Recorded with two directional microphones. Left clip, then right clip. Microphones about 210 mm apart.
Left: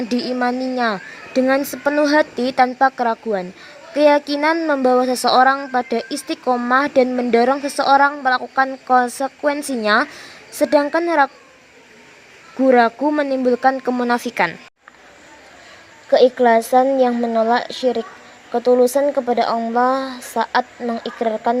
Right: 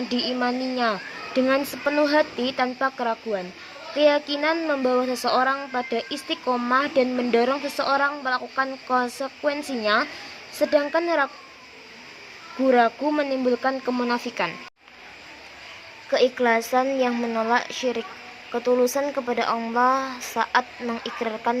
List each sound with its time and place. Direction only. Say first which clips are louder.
0.1 s speech: left 4 dB; 35° left (ahead or behind)
12.6 s speech: left 5 dB; 35° left (ahead or behind)
16.0 s a woman's voice: left 8 dB; 20° left (ahead or behind)